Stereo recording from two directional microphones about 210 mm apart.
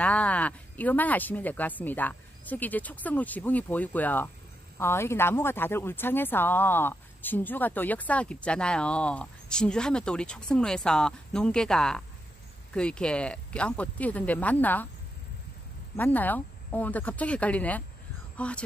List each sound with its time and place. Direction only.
0.0 s speech: 5° left (ahead or behind)
16.0 s speech: 10° left (ahead or behind)
18.3 s a sound: 5° left (ahead or behind)